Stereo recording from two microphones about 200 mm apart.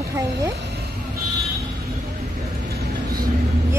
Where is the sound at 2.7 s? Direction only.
45° right (ahead or behind).